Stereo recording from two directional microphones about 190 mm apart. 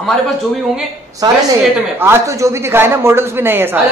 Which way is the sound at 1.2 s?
20° right (ahead or behind).